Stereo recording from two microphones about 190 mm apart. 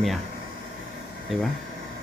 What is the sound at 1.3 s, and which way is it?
Speech, centre (ahead or behind).